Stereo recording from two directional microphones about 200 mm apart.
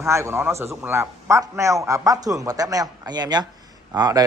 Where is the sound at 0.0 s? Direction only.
15° right (ahead or behind).